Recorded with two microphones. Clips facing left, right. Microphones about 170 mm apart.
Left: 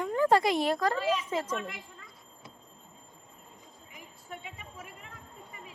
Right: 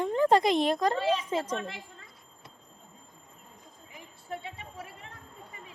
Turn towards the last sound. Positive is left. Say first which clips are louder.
# right 3 dB
turn(degrees=-30)  # may be behind; listen again after turning